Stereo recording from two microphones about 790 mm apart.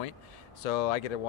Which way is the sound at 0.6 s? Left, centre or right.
Left.